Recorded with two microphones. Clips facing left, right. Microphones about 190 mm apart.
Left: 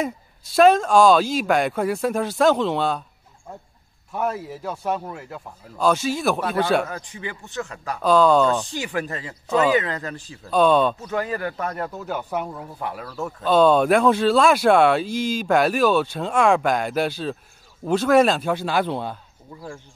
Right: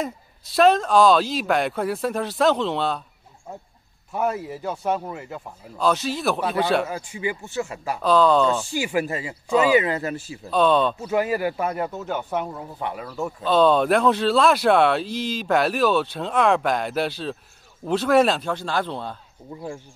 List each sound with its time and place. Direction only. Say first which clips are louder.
0.0 s a man's voice: left 2 dB; centre (ahead or behind)
4.1 s a man's voice: right 1 dB; 5° right (ahead or behind)
6.9 s a man's voice: right 5 dB; 10° right (ahead or behind)
10.5 s a man's voice: left 2 dB; 5° left (ahead or behind)
11.0 s a man's voice: right 3 dB; 10° right (ahead or behind)
13.4 s a man's voice: left 2 dB; 5° left (ahead or behind)
15.0 s speech: left 3 dB; 45° left (ahead or behind)
15.3 s a man's voice: left 2 dB; centre (ahead or behind)
18.5 s speech: left 3 dB; 10° left (ahead or behind)